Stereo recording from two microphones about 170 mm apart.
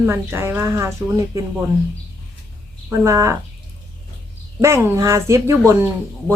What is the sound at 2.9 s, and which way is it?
Speech, 15° right (ahead or behind).